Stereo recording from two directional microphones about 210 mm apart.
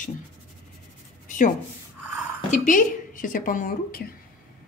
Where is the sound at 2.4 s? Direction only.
40° left (ahead or behind).